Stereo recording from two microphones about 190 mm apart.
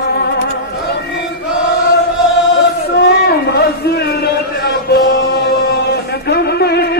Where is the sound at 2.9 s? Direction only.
60° left (ahead or behind).